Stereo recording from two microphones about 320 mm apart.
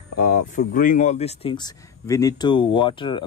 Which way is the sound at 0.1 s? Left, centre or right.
Left.